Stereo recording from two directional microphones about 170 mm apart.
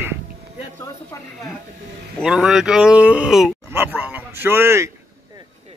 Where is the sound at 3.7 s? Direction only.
10° right (ahead or behind).